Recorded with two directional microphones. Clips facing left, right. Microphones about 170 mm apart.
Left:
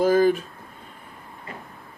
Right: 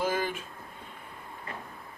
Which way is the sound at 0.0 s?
40° left (ahead or behind).